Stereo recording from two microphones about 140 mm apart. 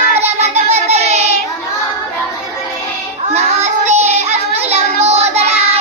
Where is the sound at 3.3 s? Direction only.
55° right (ahead or behind).